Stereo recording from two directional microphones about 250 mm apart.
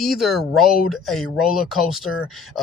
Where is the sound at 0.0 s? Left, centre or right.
Centre.